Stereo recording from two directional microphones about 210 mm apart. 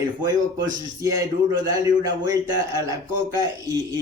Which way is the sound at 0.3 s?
15° right (ahead or behind).